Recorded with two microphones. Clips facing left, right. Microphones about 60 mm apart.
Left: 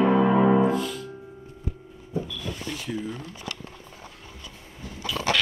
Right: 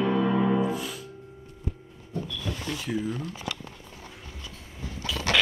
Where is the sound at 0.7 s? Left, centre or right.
Centre.